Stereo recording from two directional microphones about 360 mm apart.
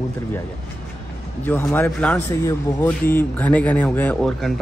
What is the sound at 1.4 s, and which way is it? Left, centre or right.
A man's voice, centre.